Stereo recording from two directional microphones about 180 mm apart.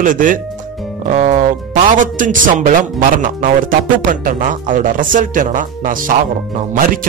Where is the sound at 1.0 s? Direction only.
40° right (ahead or behind).